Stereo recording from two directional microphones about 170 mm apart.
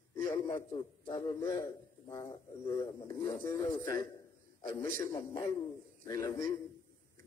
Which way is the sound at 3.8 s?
25° left (ahead or behind).